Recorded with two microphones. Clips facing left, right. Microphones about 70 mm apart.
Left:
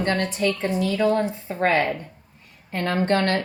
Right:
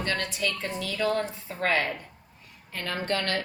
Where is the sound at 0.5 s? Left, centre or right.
Left.